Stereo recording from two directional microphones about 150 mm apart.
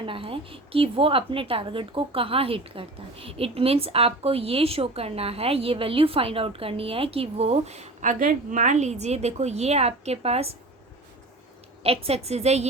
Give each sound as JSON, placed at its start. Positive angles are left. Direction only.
{"t": 0.0, "sound": "a woman's voice", "side_deg": -35}
{"t": 8.2, "sound": "a woman's voice", "side_deg": -60}
{"t": 11.8, "sound": "a woman's voice", "side_deg": -40}